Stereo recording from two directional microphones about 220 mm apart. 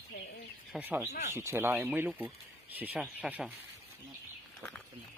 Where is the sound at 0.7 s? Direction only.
10° right (ahead or behind).